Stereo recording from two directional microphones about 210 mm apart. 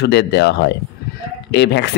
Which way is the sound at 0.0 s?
55° left (ahead or behind).